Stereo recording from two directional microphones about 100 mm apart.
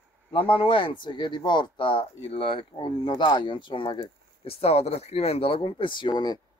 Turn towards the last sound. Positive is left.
turn(degrees=45)  # may be behind; listen again after turning